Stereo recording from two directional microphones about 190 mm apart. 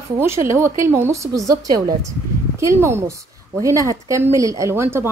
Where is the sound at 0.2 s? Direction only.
15° right (ahead or behind).